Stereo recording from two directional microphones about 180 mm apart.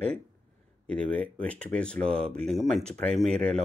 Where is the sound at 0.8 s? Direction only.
5° left (ahead or behind).